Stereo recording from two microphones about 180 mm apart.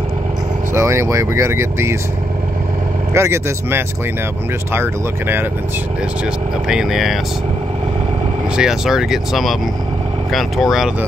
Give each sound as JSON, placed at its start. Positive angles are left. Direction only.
{"t": 0.7, "sound": "speech", "side_deg": -15}
{"t": 3.1, "sound": "speech", "side_deg": -15}
{"t": 6.7, "sound": "speech", "side_deg": -5}
{"t": 8.5, "sound": "speech", "side_deg": -5}